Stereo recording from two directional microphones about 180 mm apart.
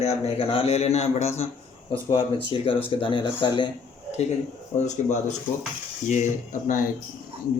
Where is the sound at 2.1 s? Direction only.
25° left (ahead or behind).